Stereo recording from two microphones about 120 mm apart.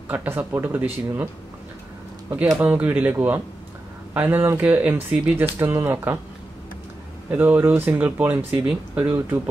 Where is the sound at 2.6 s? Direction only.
15° right (ahead or behind).